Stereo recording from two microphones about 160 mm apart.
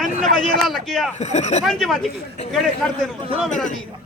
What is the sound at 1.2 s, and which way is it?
Speech, 45° left (ahead or behind).